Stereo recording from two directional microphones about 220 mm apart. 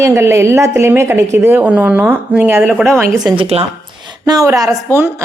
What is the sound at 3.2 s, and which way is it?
A woman's voice, 25° right (ahead or behind).